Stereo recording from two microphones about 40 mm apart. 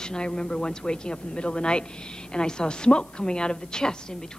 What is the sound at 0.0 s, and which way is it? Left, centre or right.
Speech, centre.